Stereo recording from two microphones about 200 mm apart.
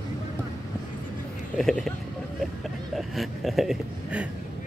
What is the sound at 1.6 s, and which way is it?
Speech, centre (ahead or behind).